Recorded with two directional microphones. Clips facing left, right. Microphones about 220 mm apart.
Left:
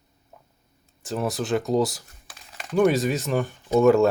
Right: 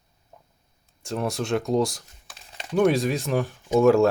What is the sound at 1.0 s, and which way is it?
Speech, centre (ahead or behind).